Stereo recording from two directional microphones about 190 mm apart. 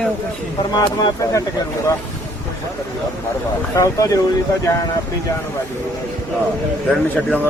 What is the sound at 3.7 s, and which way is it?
Speech, 15° left (ahead or behind).